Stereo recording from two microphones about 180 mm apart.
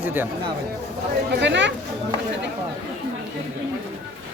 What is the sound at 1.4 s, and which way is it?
Speech, 80° right.